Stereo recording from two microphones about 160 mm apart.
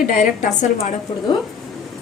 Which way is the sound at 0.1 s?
55° left (ahead or behind).